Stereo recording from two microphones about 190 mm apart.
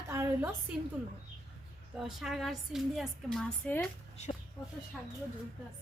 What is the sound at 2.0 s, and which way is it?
A woman's voice, centre (ahead or behind).